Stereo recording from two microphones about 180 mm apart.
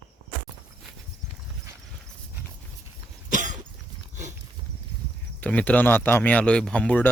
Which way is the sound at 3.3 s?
45° right (ahead or behind).